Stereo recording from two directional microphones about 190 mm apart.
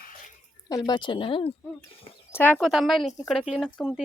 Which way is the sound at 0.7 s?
20° left (ahead or behind).